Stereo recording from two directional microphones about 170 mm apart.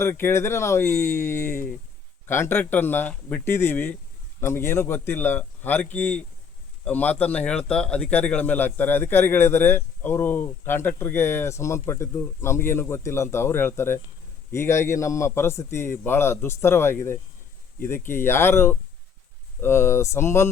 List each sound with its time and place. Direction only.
0.0 s speech: 15° left (ahead or behind)